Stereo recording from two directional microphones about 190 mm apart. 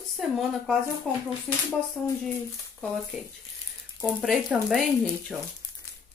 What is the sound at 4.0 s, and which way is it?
Speech, 5° right (ahead or behind).